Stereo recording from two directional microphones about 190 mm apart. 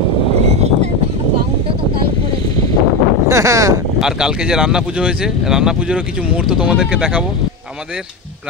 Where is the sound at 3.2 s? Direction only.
15° right (ahead or behind).